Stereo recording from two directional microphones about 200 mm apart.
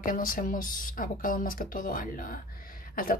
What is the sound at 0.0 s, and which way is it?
Speech, 45° left (ahead or behind).